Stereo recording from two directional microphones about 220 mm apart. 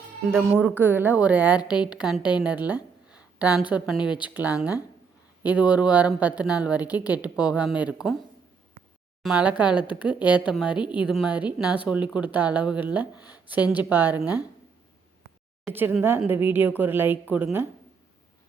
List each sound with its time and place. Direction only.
0.3 s a woman's voice: 5° right (ahead or behind)
3.1 s a sound: 5° right (ahead or behind)
3.7 s speech: 5° right (ahead or behind)
4.0 s speech: 20° left (ahead or behind)
4.4 s a woman's voice: 5° right (ahead or behind)
9.2 s a woman's voice: 5° right (ahead or behind)
15.7 s a woman's voice: 10° right (ahead or behind)